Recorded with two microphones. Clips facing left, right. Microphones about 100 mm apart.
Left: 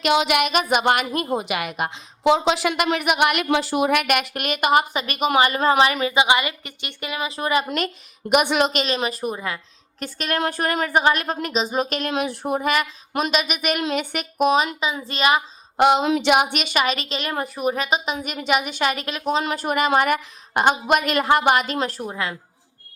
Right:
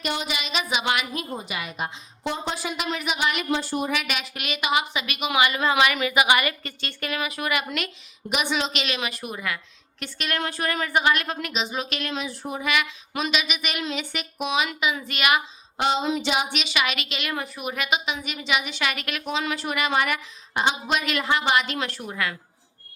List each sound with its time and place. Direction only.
0.0 s a woman's voice: 85° left; by 7.9 s 35° left (ahead or behind)
8.3 s a woman's voice: 55° left (ahead or behind)
8.8 s a woman's voice: 35° left (ahead or behind)
10.0 s a woman's voice: 40° left (ahead or behind)
15.8 s a woman's voice: 65° left (ahead or behind); by 22.1 s 40° left (ahead or behind)
22.1 s a woman's voice: 25° left (ahead or behind)